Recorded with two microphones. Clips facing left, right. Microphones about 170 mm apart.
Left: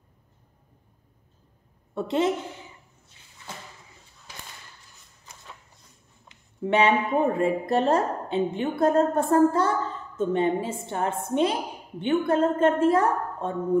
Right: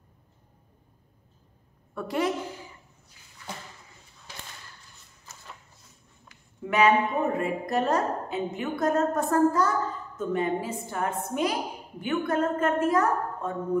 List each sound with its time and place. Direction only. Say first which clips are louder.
2.0 s speech: left 4 dB; 25° left (ahead or behind)
6.2 s speech: left 7 dB; 30° left (ahead or behind)